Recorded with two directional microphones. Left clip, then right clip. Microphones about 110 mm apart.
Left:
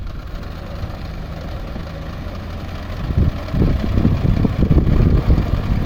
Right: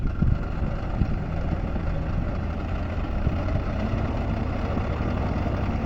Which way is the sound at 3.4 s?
45° left (ahead or behind).